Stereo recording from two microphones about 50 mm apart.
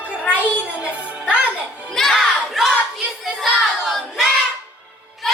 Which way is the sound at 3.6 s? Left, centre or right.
Centre.